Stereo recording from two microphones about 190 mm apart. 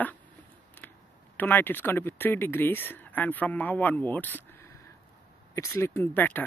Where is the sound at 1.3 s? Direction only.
10° left (ahead or behind).